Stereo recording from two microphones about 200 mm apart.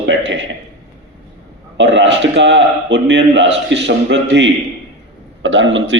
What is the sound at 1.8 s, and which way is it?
A man's voice, 65° right (ahead or behind).